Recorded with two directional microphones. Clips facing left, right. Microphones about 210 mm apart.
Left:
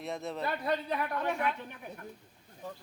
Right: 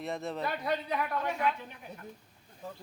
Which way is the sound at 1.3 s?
55° left (ahead or behind).